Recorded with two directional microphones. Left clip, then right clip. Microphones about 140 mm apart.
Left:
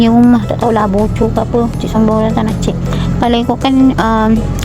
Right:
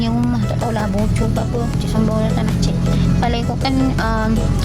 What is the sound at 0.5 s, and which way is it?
Speech, 35° left (ahead or behind).